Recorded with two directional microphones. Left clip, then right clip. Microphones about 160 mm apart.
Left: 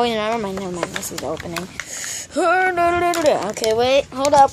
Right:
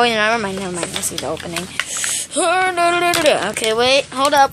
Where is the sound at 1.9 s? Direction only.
45° left (ahead or behind).